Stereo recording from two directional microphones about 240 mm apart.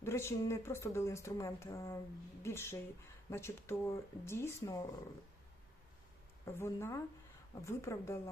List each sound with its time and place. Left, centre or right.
0.0 s speech: centre
6.4 s speech: centre